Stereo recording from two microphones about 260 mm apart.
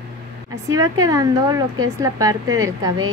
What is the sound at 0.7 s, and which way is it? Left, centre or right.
A woman's voice, centre.